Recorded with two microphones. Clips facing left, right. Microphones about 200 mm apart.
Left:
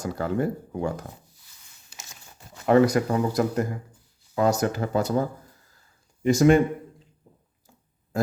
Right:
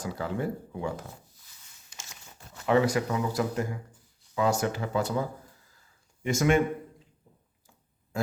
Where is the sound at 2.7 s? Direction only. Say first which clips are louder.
Left 5 dB; 40° left (ahead or behind).